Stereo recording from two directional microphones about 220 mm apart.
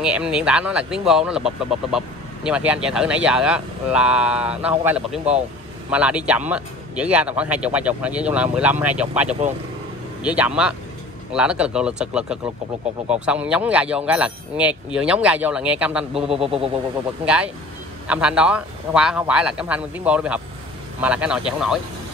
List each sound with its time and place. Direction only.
0.0 s speech: 5° right (ahead or behind)
16.3 s a sound: 25° right (ahead or behind)
17.2 s speech: 5° right (ahead or behind)